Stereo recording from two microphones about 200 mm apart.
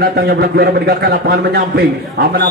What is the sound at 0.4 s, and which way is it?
A man's voice, 50° right (ahead or behind).